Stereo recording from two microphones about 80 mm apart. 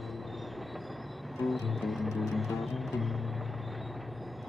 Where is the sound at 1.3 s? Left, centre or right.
Centre.